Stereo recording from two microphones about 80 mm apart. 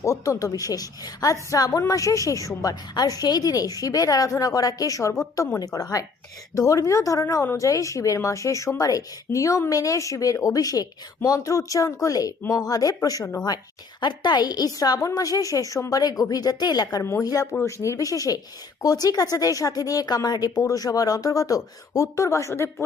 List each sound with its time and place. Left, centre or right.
0.0 s a woman's voice: left
14.0 s speech: left
17.0 s a woman's voice: left